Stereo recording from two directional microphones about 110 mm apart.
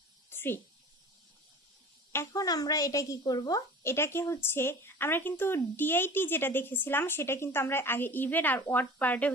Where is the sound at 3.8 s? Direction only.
20° left (ahead or behind).